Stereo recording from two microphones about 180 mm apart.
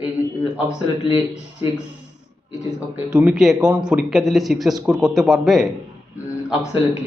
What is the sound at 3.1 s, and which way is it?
A man's voice, 5° right (ahead or behind).